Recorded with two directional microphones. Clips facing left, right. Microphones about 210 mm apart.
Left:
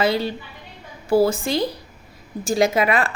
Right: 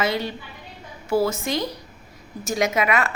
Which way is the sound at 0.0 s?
30° left (ahead or behind).